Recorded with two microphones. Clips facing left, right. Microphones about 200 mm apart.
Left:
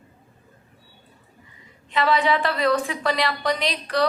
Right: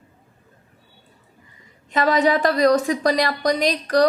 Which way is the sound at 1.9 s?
45° right (ahead or behind).